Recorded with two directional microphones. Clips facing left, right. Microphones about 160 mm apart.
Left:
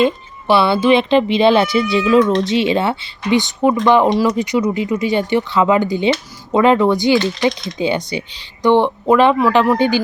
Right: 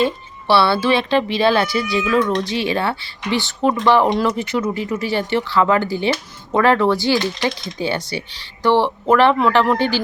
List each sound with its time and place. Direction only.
0.0 s speech: 15° left (ahead or behind)